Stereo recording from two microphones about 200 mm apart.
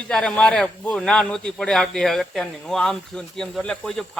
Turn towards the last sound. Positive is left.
turn(degrees=5)  # may be behind; listen again after turning